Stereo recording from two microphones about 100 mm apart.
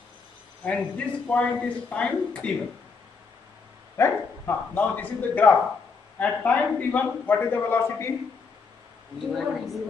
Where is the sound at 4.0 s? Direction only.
20° left (ahead or behind).